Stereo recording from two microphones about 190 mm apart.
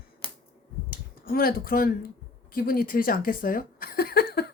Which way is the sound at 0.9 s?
50° left (ahead or behind).